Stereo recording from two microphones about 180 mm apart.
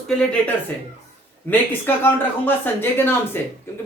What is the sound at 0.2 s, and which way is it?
Speech, 5° left (ahead or behind).